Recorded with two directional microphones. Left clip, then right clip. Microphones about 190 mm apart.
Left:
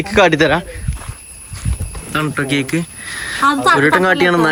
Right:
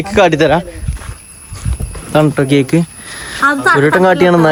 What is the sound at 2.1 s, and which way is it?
Speech, 30° right (ahead or behind).